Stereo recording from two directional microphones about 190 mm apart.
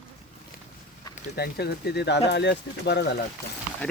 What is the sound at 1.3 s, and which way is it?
Speech, 55° left (ahead or behind).